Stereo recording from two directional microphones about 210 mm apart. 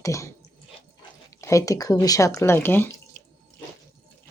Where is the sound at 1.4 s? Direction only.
15° left (ahead or behind).